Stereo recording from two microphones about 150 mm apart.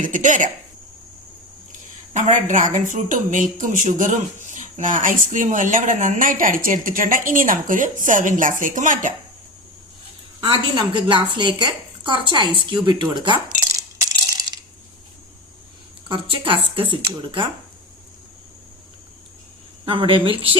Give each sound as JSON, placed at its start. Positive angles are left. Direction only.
{"t": 0.0, "sound": "speech", "side_deg": -60}
{"t": 2.1, "sound": "speech", "side_deg": -55}
{"t": 10.4, "sound": "a woman's voice", "side_deg": -35}
{"t": 14.0, "sound": "a sound", "side_deg": -25}
{"t": 16.0, "sound": "a woman's voice", "side_deg": -35}
{"t": 19.8, "sound": "a woman's voice", "side_deg": -35}